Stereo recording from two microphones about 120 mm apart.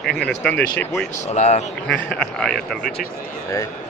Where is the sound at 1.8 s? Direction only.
10° left (ahead or behind).